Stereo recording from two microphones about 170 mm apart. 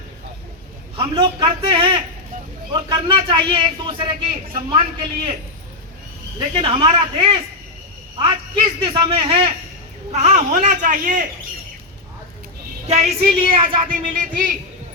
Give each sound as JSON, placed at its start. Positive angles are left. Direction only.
{"t": 0.9, "sound": "a man's voice", "side_deg": -30}
{"t": 6.6, "sound": "a man's voice", "side_deg": -35}
{"t": 12.9, "sound": "a man's voice", "side_deg": -40}
{"t": 13.8, "sound": "speech", "side_deg": -55}